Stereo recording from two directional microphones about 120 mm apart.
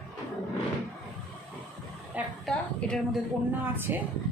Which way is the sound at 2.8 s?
10° left (ahead or behind).